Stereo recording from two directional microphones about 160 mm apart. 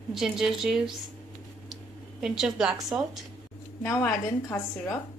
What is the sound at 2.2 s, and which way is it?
Speech, 5° right (ahead or behind).